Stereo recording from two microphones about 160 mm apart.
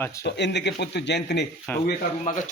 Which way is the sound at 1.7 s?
10° left (ahead or behind).